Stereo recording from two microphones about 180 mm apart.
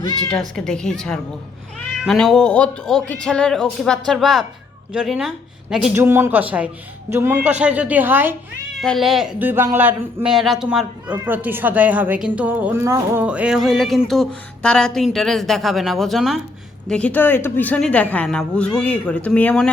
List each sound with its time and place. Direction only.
0.3 s a woman's voice: 5° left (ahead or behind)
8.8 s a woman's voice: centre (ahead or behind)